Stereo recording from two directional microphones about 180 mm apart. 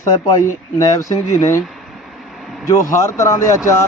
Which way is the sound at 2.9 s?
20° left (ahead or behind).